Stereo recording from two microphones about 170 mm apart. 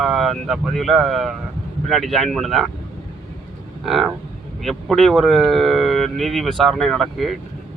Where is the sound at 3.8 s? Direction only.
Centre (ahead or behind).